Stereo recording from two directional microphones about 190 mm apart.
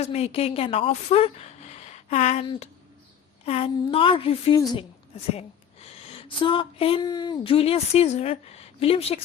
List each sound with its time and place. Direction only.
0.0 s a woman's voice: 35° left (ahead or behind)